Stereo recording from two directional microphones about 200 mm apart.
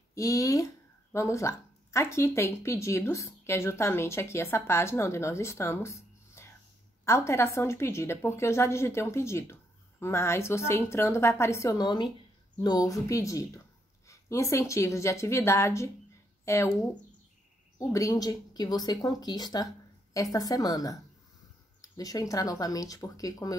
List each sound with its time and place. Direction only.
0.1 s speech: 15° left (ahead or behind)